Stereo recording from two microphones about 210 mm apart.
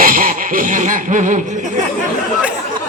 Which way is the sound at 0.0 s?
40° right (ahead or behind).